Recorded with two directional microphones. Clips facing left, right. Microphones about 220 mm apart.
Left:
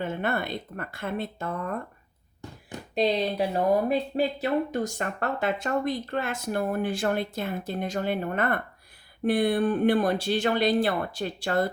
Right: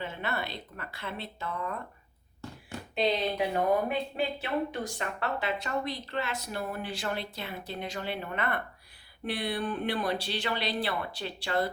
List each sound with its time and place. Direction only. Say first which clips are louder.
0.0 s speech: left 6 dB; 50° left (ahead or behind)
2.9 s speech: left 4 dB; 40° left (ahead or behind)